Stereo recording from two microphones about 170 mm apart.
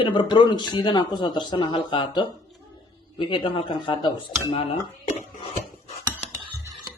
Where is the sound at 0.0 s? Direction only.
30° left (ahead or behind).